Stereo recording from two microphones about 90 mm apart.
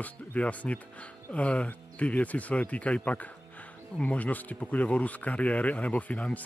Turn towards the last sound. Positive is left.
turn(degrees=15)  # may be behind; listen again after turning